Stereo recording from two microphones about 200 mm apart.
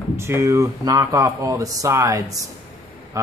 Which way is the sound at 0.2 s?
15° right (ahead or behind).